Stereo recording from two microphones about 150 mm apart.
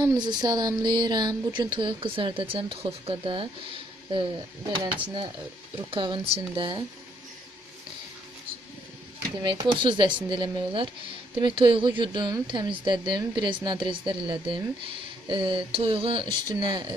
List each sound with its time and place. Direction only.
0.0 s speech: 30° right (ahead or behind)
5.9 s speech: 35° right (ahead or behind)
9.4 s speech: 35° right (ahead or behind)